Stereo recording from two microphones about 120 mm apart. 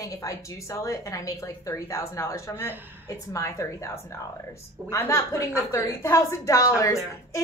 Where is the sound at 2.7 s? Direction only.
15° right (ahead or behind).